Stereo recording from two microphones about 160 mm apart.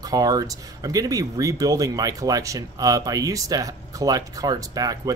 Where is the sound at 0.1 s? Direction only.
25° right (ahead or behind).